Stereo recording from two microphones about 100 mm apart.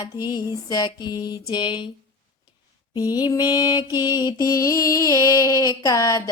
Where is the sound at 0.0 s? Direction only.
40° left (ahead or behind).